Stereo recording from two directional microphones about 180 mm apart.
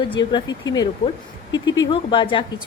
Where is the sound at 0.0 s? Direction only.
25° left (ahead or behind).